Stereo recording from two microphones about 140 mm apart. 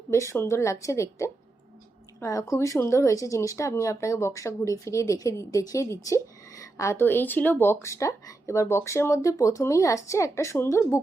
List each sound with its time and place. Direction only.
0.1 s speech: 20° left (ahead or behind)
2.2 s speech: 20° left (ahead or behind)